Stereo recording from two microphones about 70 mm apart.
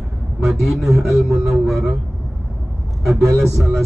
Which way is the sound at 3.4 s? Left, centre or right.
Centre.